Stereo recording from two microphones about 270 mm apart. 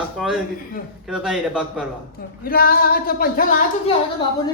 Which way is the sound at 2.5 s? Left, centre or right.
Left.